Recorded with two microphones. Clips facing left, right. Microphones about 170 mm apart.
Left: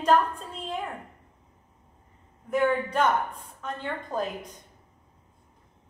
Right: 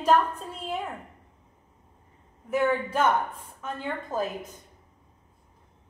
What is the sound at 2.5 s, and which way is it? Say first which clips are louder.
A woman's voice: even; 5° right (ahead or behind).